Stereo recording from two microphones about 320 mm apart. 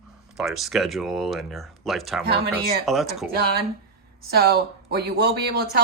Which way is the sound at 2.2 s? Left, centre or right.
Right.